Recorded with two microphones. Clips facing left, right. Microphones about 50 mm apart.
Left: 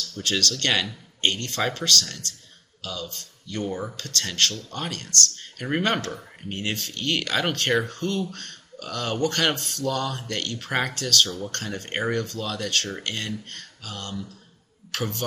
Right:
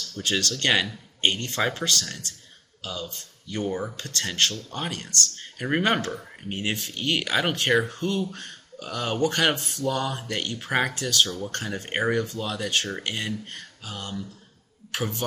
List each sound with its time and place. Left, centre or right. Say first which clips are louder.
0.2 s speech: even; centre
11.3 s speech: even; centre